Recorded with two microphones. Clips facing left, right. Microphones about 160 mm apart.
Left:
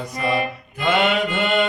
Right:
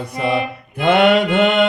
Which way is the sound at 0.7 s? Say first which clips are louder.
Right 6 dB; 60° right (ahead or behind).